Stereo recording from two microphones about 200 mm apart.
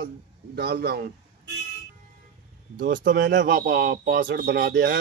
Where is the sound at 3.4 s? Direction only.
50° right (ahead or behind).